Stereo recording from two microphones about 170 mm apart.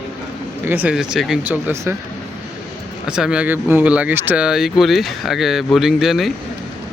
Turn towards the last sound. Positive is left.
turn(degrees=0)  # may be behind; listen again after turning